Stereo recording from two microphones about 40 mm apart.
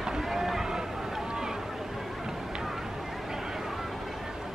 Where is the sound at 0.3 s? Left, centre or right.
Centre.